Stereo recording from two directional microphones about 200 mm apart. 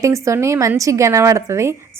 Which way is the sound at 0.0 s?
15° right (ahead or behind).